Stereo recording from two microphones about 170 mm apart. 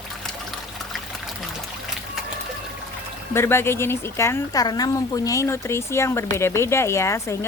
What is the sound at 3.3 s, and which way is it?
Speech, 15° left (ahead or behind).